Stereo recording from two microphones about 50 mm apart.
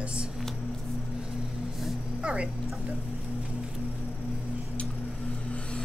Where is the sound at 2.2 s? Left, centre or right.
Right.